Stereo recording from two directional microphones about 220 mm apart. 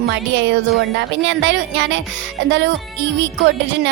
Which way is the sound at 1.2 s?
55° right (ahead or behind).